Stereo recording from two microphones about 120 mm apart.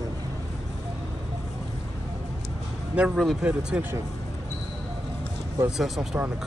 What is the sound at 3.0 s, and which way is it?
Speech, 10° right (ahead or behind).